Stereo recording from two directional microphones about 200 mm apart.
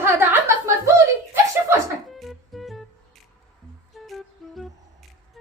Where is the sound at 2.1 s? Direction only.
Centre (ahead or behind).